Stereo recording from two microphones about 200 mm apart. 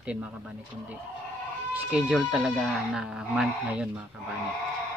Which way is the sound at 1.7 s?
5° right (ahead or behind).